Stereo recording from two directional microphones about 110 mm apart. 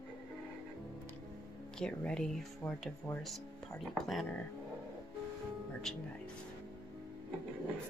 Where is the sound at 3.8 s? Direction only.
Centre (ahead or behind).